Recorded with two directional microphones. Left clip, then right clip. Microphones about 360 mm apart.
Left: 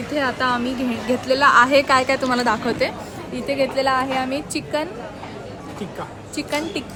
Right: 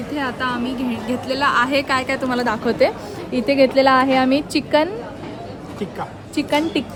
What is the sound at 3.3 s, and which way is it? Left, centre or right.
A woman's voice, right.